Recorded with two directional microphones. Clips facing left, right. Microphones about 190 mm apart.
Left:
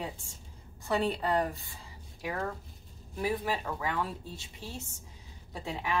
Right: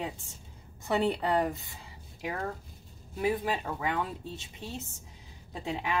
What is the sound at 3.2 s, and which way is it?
Speech, 20° right (ahead or behind).